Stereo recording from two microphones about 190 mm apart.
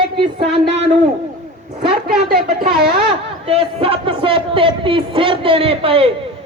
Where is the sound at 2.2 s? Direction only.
50° right (ahead or behind).